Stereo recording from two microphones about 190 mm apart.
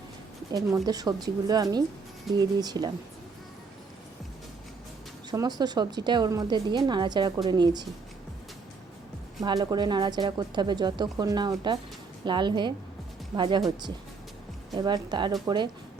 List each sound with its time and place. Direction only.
0.5 s speech: 20° right (ahead or behind)
5.3 s speech: 20° right (ahead or behind)
9.4 s speech: 20° right (ahead or behind)
14.8 s speech: 20° right (ahead or behind)